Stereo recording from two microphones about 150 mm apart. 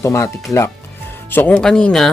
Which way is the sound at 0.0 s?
20° left (ahead or behind).